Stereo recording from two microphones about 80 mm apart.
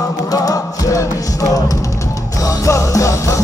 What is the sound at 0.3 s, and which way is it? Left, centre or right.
Music, left.